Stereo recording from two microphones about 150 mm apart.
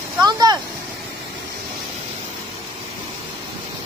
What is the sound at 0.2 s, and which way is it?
Vehicle, 25° right (ahead or behind).